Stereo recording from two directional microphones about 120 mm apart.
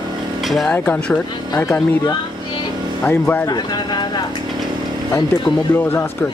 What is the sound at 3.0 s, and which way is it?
Speech, 15° left (ahead or behind).